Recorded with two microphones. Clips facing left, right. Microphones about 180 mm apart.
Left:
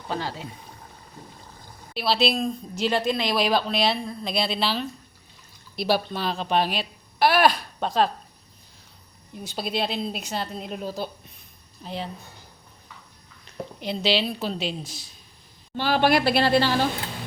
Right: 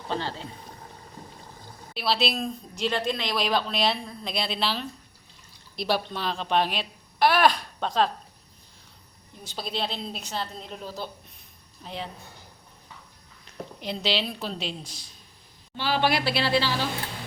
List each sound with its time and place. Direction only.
0.1 s a woman's voice: 10° left (ahead or behind)
1.9 s a woman's voice: centre (ahead or behind)
9.4 s a woman's voice: 10° left (ahead or behind)
11.8 s a woman's voice: centre (ahead or behind)
13.8 s a woman's voice: centre (ahead or behind)
15.8 s a woman's voice: 50° left (ahead or behind)